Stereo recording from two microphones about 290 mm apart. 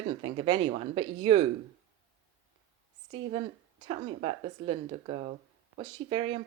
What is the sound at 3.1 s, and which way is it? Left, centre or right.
Speech, centre.